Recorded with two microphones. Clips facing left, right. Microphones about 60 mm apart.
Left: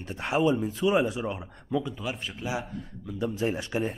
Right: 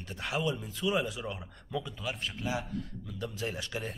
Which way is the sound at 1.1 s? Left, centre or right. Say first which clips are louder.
Left 7 dB; centre.